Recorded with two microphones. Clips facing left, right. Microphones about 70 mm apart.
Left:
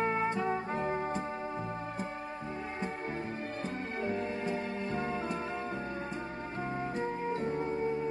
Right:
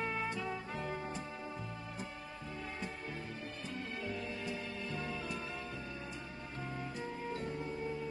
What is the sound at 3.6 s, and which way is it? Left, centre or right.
Music, left.